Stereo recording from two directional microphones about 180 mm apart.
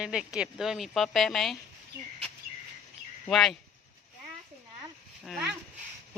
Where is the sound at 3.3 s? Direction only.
Centre (ahead or behind).